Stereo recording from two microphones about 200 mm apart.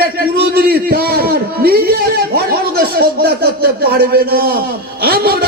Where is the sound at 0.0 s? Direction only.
50° right (ahead or behind).